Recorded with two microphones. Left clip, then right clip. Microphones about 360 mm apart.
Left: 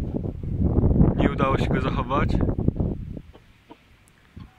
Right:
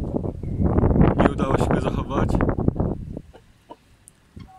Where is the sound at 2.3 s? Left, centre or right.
Right.